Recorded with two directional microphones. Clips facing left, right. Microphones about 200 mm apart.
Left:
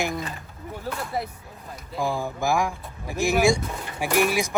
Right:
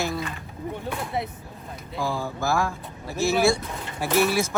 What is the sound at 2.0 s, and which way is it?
Speech, 15° left (ahead or behind).